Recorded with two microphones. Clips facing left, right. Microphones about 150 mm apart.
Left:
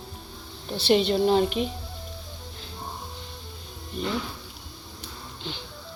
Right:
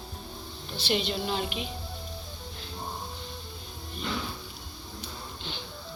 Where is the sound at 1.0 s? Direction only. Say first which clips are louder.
Left 10 dB; 40° left (ahead or behind).